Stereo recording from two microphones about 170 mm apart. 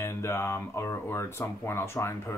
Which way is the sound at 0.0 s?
15° left (ahead or behind).